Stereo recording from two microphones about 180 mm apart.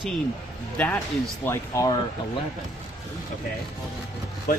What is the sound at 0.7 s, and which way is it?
Speech, 10° left (ahead or behind).